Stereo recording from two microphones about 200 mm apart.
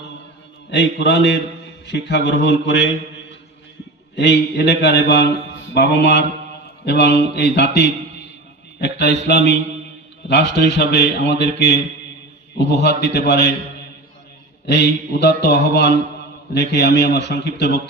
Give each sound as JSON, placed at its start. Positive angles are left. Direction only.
{"t": 0.7, "sound": "a man's voice", "side_deg": 60}
{"t": 4.1, "sound": "a man's voice", "side_deg": 60}
{"t": 14.7, "sound": "a man's voice", "side_deg": 60}